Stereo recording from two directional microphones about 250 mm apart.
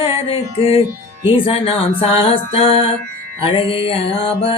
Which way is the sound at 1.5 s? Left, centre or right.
Left.